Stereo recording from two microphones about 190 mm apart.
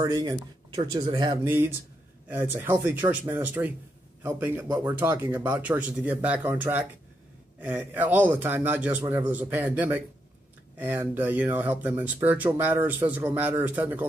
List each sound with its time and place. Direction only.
0.0 s speech: 20° right (ahead or behind)
1.4 s speech: 10° right (ahead or behind)